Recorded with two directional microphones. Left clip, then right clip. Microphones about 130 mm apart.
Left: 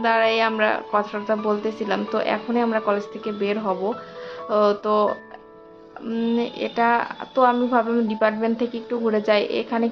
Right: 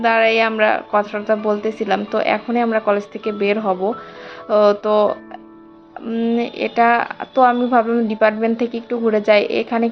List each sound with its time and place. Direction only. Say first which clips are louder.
0.0 s speech: right 4 dB; 15° right (ahead or behind)
6.3 s speech: right 6 dB; 20° right (ahead or behind)